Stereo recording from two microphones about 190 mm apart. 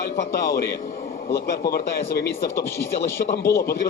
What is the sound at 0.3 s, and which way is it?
A man's voice, 55° left (ahead or behind).